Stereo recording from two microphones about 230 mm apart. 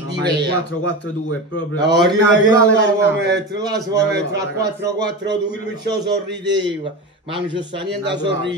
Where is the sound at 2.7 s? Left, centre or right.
Right.